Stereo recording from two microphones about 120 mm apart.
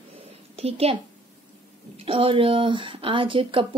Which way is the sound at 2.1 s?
50° right (ahead or behind).